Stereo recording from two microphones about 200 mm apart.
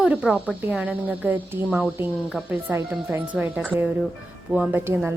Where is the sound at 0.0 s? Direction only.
5° right (ahead or behind).